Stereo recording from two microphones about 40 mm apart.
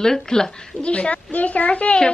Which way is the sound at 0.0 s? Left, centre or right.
Centre.